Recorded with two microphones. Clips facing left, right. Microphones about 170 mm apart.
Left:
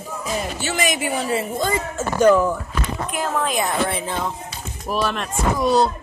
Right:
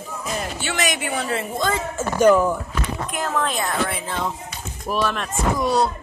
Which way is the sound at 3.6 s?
20° left (ahead or behind).